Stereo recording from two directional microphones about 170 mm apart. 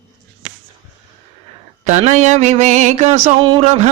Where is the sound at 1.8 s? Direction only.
45° right (ahead or behind).